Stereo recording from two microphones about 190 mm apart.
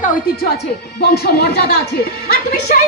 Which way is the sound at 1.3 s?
55° left (ahead or behind).